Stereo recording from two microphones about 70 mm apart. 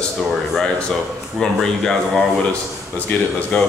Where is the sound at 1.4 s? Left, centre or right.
Centre.